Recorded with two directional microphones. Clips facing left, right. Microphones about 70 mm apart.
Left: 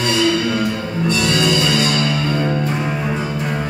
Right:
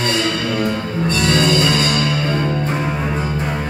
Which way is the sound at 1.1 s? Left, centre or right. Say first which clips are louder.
Right 1 dB; right.